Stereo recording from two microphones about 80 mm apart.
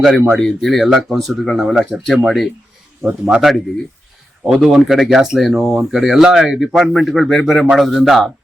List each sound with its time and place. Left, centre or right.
0.0 s speech: centre
4.6 s speech: centre